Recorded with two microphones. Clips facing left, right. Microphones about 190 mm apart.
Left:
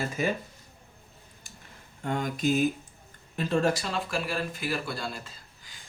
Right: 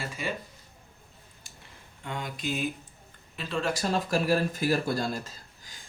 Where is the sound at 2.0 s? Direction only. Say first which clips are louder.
Left 7 dB; 45° left (ahead or behind).